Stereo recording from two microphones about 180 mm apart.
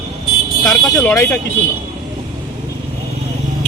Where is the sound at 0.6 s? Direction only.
5° left (ahead or behind).